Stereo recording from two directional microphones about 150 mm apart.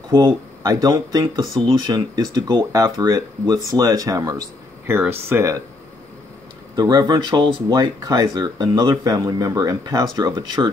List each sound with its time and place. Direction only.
0.1 s speech: 25° right (ahead or behind)
6.7 s speech: 25° right (ahead or behind)